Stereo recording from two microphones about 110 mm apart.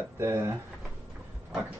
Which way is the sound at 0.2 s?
25° right (ahead or behind).